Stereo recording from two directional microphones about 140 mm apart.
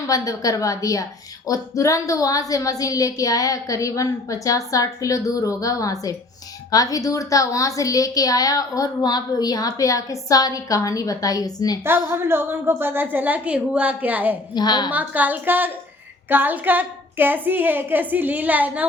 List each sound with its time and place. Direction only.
0.1 s a woman's voice: 25° left (ahead or behind)
11.8 s a woman's voice: 15° right (ahead or behind)
14.5 s a woman's voice: 30° left (ahead or behind)
14.8 s a woman's voice: 10° right (ahead or behind)